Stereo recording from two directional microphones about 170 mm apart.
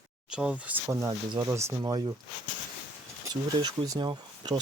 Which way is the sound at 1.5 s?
15° right (ahead or behind).